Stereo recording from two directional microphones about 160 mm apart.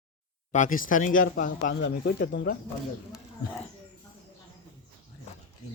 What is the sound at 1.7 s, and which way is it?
Speech, 70° left (ahead or behind).